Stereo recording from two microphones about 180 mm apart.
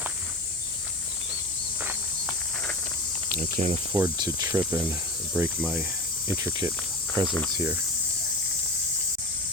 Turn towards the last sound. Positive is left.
turn(degrees=-15)  # may be behind; listen again after turning